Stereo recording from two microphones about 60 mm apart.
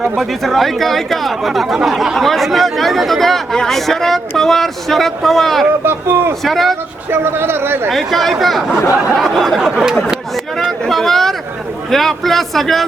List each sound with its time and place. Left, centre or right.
0.2 s speech: centre
5.8 s speech: right
6.4 s speech: centre
7.1 s speech: right
7.9 s speech: centre
9.6 s a sound: centre
10.1 s a sound: centre
11.9 s speech: centre